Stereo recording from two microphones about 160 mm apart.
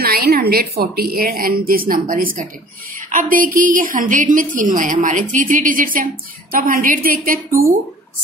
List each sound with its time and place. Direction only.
0.0 s a woman's voice: 85° right; by 7.3 s 60° right (ahead or behind)